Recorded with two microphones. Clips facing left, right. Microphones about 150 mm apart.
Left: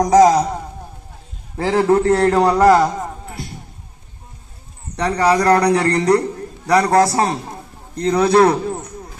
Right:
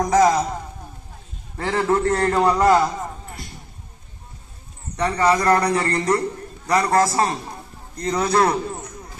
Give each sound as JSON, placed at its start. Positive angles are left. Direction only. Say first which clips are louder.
{"t": 0.0, "sound": "a man's voice", "louder": "left 5 dB", "side_deg": 40}
{"t": 1.7, "sound": "a man's voice", "louder": "left 5 dB", "side_deg": 35}
{"t": 4.9, "sound": "a man's voice", "louder": "left 3 dB", "side_deg": 35}
{"t": 8.0, "sound": "a man's voice", "louder": "left 6 dB", "side_deg": 60}